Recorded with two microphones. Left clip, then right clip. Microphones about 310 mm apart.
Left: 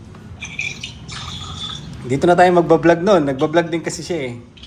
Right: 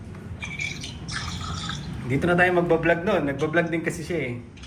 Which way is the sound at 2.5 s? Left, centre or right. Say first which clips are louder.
Left 8 dB; left.